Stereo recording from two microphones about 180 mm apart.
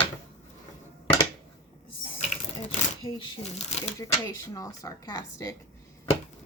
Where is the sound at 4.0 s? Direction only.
20° left (ahead or behind).